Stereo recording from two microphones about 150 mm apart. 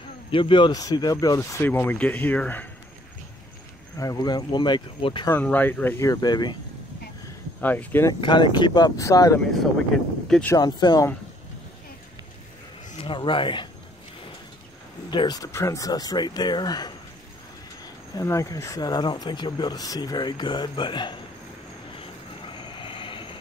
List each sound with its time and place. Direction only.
0.3 s speech: 35° left (ahead or behind); by 2.7 s 10° left (ahead or behind)
4.0 s speech: 25° left (ahead or behind)
5.3 s speech: 10° left (ahead or behind); by 6.5 s 30° left (ahead or behind)
7.6 s speech: 10° left (ahead or behind)
8.1 s speech: 30° left (ahead or behind)
10.2 s speech: 5° left (ahead or behind)
10.5 s speech: 30° left (ahead or behind)
12.9 s speech: 35° left (ahead or behind)
15.0 s speech: 30° left (ahead or behind)
18.1 s speech: 20° left (ahead or behind)
22.5 s vehicle: 35° left (ahead or behind)